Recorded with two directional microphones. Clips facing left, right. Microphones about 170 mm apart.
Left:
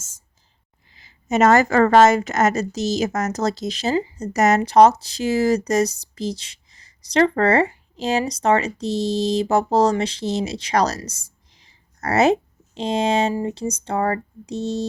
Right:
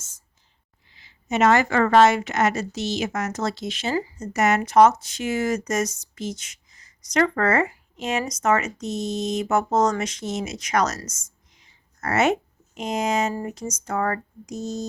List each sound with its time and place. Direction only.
0.9 s speech: 45° left (ahead or behind)